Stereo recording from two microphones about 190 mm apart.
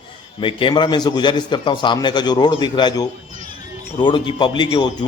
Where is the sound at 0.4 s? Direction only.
25° left (ahead or behind).